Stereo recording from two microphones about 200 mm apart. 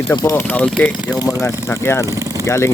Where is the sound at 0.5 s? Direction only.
5° left (ahead or behind).